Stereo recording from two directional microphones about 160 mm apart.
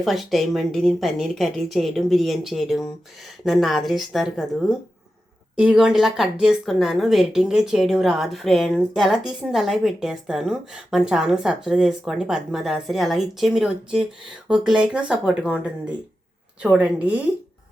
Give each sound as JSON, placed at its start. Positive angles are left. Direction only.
{"t": 0.0, "sound": "a woman's voice", "side_deg": 0}